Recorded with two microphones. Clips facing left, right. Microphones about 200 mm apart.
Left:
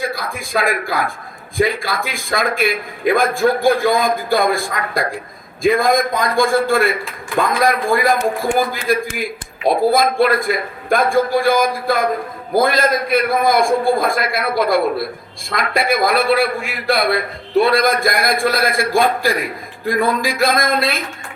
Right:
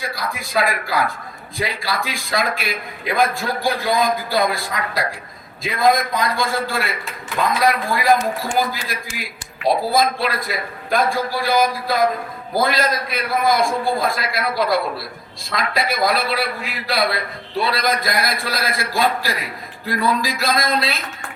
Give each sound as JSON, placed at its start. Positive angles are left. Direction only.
{"t": 0.1, "sound": "a man's voice", "side_deg": 50}